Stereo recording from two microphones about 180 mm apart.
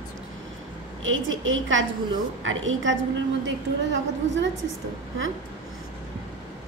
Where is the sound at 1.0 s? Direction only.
90° right.